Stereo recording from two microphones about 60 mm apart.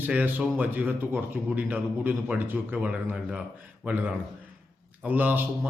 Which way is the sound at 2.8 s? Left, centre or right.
Right.